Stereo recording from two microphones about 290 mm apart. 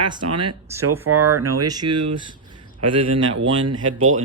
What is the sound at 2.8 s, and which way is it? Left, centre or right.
Speech, right.